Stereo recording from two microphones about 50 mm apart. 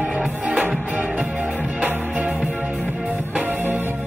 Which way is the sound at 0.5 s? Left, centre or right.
Right.